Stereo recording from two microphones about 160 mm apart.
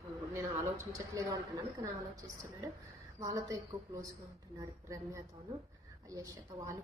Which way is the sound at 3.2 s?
20° right (ahead or behind).